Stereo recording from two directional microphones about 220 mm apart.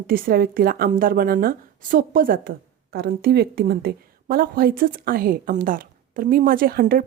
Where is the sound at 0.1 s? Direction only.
40° right (ahead or behind).